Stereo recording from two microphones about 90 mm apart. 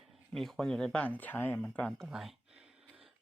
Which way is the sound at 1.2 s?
20° left (ahead or behind).